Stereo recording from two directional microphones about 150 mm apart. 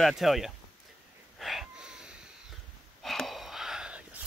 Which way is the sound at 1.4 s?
Centre (ahead or behind).